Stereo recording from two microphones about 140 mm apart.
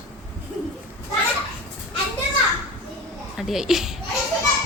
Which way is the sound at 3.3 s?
5° right (ahead or behind).